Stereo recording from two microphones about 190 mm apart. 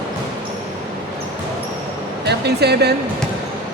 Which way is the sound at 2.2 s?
60° right (ahead or behind).